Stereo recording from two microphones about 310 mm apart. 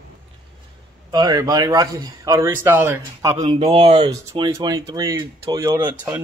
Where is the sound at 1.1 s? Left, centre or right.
Centre.